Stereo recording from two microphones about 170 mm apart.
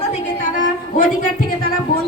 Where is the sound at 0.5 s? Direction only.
55° left (ahead or behind).